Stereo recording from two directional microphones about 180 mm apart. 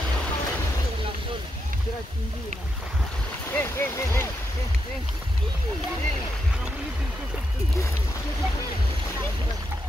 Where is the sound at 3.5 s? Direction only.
15° left (ahead or behind).